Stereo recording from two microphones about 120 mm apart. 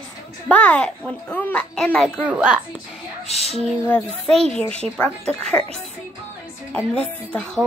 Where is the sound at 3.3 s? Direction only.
60° left (ahead or behind).